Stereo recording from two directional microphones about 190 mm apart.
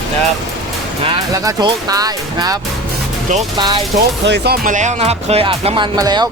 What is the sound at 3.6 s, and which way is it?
Speech, 25° right (ahead or behind).